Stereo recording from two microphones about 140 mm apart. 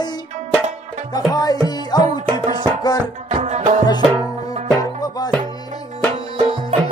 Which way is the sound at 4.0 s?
40° right (ahead or behind).